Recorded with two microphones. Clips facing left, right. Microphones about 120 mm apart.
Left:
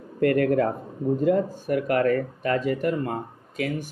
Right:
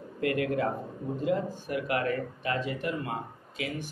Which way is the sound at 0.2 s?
45° left (ahead or behind).